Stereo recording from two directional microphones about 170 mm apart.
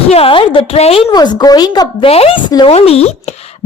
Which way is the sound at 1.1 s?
25° left (ahead or behind).